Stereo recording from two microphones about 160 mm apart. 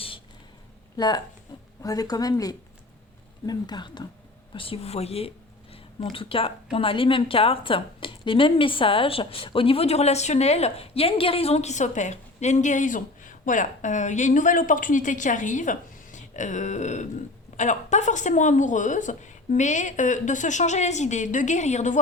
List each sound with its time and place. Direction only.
0.9 s a woman's voice: 25° left (ahead or behind); by 21.9 s 45° left (ahead or behind)